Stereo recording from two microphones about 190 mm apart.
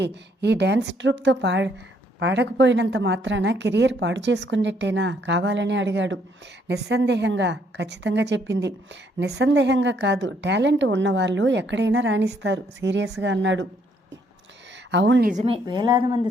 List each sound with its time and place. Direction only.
0.0 s a woman's voice: 65° right (ahead or behind)
14.8 s speech: 70° right (ahead or behind)
15.3 s a woman's voice: 35° right (ahead or behind)